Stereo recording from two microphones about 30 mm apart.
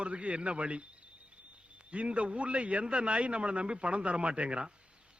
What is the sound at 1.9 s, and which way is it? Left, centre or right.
A man's voice, right.